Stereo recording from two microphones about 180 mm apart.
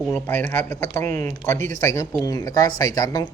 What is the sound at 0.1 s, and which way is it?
Speech, 10° left (ahead or behind).